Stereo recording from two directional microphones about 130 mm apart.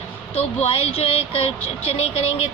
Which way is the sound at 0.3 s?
50° left (ahead or behind).